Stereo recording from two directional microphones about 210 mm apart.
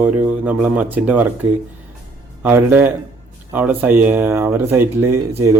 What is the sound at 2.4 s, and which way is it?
Speech, 10° right (ahead or behind).